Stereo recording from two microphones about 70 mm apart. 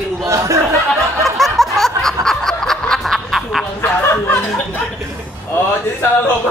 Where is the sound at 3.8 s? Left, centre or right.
Left.